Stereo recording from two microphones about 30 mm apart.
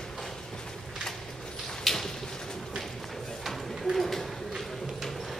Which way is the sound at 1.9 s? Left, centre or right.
Centre.